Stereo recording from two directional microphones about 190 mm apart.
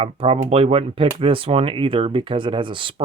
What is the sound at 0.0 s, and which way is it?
Speech, 30° right (ahead or behind).